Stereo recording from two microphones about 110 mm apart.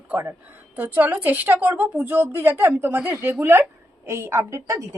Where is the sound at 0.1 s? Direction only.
20° right (ahead or behind).